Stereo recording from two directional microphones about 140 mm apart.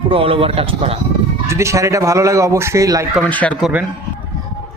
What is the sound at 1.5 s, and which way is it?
Speech, 20° right (ahead or behind).